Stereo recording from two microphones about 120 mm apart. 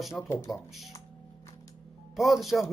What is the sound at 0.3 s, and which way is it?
Speech, 20° left (ahead or behind).